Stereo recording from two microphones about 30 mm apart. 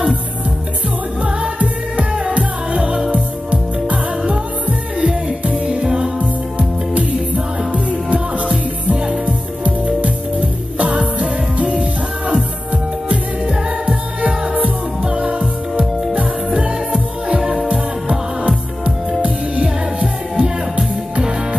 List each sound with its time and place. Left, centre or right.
1.6 s music: right
7.3 s music: right
14.2 s music: right
15.0 s music: right
17.6 s music: right
19.6 s music: right